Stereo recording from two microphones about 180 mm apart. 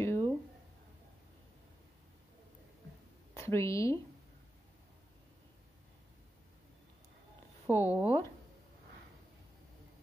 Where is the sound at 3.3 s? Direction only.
15° left (ahead or behind).